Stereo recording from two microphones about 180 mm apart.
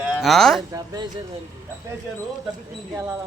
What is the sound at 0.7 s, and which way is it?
Speech, 20° right (ahead or behind).